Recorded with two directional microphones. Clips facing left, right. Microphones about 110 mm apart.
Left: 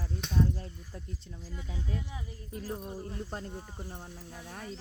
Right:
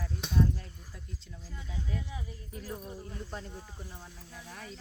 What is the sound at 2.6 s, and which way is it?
Speech, 40° left (ahead or behind).